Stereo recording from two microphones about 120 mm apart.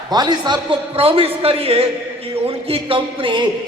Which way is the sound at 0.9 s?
55° right (ahead or behind).